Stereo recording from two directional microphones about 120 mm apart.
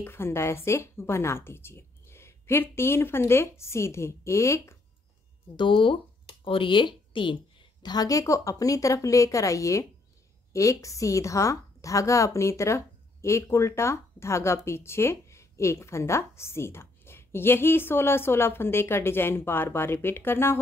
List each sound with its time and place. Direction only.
0.0 s a woman's voice: 20° left (ahead or behind)
5.6 s speech: 45° left (ahead or behind)
7.8 s a woman's voice: 35° left (ahead or behind)